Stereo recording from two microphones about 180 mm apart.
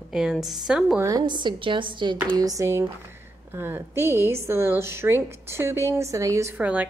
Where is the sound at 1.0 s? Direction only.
20° right (ahead or behind).